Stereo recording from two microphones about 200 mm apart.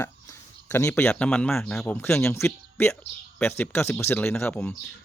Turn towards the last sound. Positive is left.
turn(degrees=10)  # may be behind; listen again after turning